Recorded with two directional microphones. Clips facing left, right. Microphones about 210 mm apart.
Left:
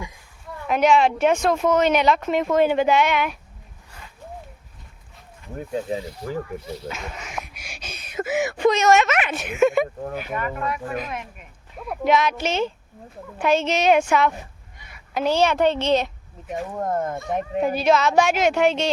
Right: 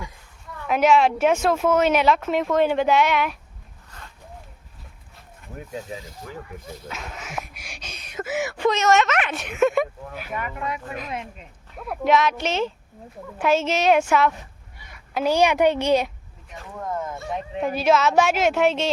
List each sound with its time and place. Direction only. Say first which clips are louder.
0.7 s speech: even; 5° right (ahead or behind)
3.9 s a sound: even; 10° left (ahead or behind)
5.5 s speech: left 7 dB; 35° left (ahead or behind)
6.8 s speech: left 3 dB; centre (ahead or behind)
10.3 s a woman's voice: left 1 dB; 20° right (ahead or behind)
11.8 s a woman's voice: even; centre (ahead or behind)
16.7 s speech: left 3 dB; 50° left (ahead or behind)
17.6 s speech: even; centre (ahead or behind)